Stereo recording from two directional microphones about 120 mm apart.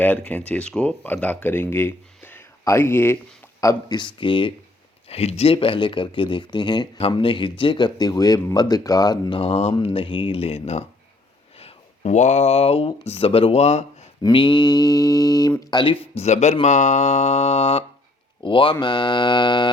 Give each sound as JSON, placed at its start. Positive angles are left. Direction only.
{"t": 0.0, "sound": "speech", "side_deg": 15}
{"t": 3.6, "sound": "speech", "side_deg": 30}
{"t": 5.0, "sound": "speech", "side_deg": 60}
{"t": 9.4, "sound": "speech", "side_deg": 60}
{"t": 9.8, "sound": "speech", "side_deg": 50}
{"t": 14.2, "sound": "speech", "side_deg": 40}
{"t": 16.1, "sound": "speech", "side_deg": 70}
{"t": 18.4, "sound": "speech", "side_deg": 45}